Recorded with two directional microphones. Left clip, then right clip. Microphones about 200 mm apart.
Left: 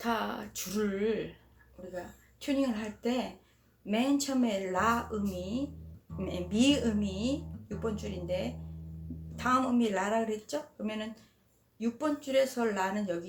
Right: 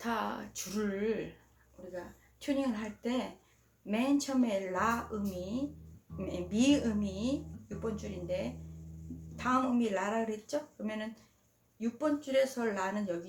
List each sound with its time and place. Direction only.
0.0 s speech: 10° left (ahead or behind)